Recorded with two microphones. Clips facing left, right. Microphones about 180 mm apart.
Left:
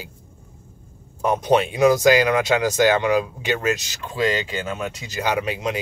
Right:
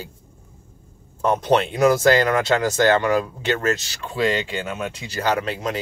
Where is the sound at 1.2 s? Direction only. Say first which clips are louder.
Even; 10° left (ahead or behind).